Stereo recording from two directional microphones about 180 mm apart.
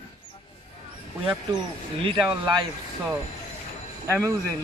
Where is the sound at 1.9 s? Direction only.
30° right (ahead or behind).